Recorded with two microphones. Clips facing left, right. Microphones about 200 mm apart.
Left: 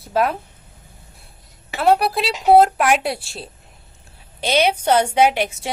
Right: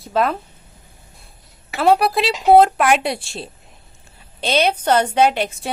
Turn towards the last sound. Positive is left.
turn(degrees=10)  # may be behind; listen again after turning